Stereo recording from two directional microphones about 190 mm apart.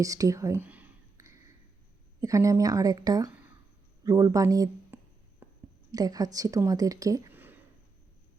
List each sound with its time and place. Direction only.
0.0 s whispering: 15° right (ahead or behind)
2.2 s a woman's voice: 15° right (ahead or behind)
5.4 s a sound: 10° right (ahead or behind)
5.9 s a woman's voice: 20° right (ahead or behind)